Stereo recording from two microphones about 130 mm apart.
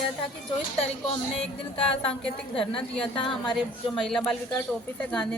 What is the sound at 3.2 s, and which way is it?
A woman's voice, centre (ahead or behind).